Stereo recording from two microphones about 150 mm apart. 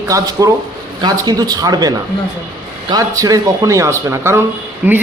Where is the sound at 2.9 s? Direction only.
25° right (ahead or behind).